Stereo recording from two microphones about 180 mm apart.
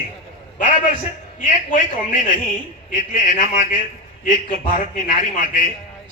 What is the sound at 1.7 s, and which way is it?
A man's voice, 45° left (ahead or behind).